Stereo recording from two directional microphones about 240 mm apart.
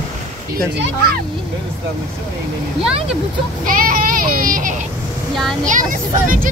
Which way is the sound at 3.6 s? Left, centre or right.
Right.